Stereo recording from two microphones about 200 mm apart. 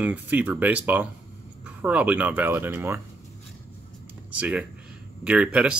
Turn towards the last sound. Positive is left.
turn(degrees=-5)  # may be behind; listen again after turning